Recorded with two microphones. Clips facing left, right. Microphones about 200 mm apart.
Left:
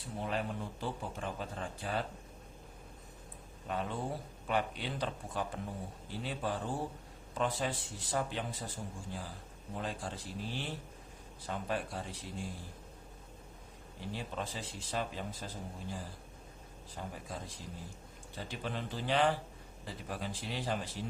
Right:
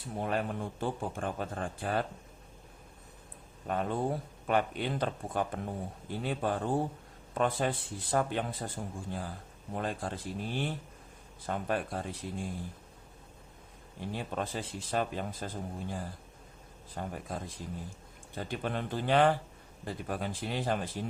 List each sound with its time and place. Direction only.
0.2 s speech: 50° right (ahead or behind)
3.7 s speech: 50° right (ahead or behind)
14.1 s speech: 55° right (ahead or behind)